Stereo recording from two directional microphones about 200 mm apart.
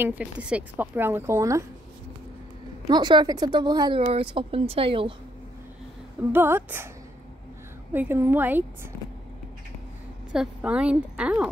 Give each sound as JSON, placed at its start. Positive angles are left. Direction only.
{"t": 0.0, "sound": "a woman's voice", "side_deg": -10}
{"t": 2.9, "sound": "speech", "side_deg": -20}
{"t": 6.3, "sound": "a woman's voice", "side_deg": -10}
{"t": 7.9, "sound": "a woman's voice", "side_deg": -10}
{"t": 10.3, "sound": "a woman's voice", "side_deg": -5}